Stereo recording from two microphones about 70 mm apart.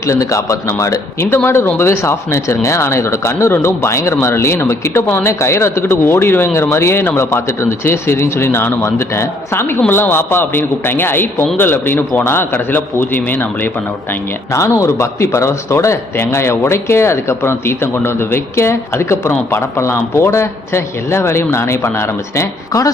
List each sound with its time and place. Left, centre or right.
0.0 s a man's voice: left
14.5 s speech: left